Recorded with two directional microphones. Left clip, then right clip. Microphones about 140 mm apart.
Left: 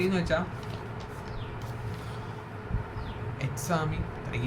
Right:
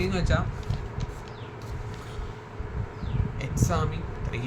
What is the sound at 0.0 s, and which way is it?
Speech, 20° right (ahead or behind).